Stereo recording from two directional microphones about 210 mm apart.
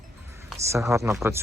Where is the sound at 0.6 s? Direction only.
15° right (ahead or behind).